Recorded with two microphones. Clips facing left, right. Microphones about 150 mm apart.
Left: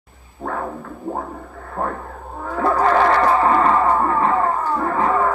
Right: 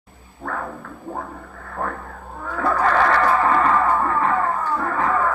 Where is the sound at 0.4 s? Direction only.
30° left (ahead or behind).